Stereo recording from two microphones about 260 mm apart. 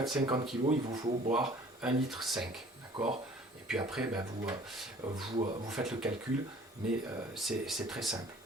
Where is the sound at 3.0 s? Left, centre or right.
Right.